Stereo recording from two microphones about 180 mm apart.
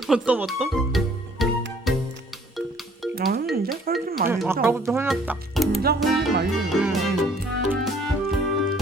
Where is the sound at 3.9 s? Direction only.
55° right (ahead or behind).